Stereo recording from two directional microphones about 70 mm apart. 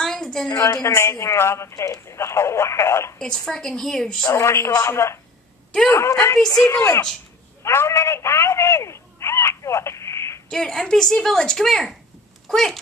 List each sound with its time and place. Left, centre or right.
0.0 s a sound: centre
0.5 s speech: left
3.2 s a woman's voice: centre
4.3 s speech: left
10.5 s a woman's voice: centre